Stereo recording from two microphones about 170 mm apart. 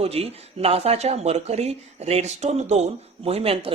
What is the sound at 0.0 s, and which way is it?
Speech, 35° right (ahead or behind).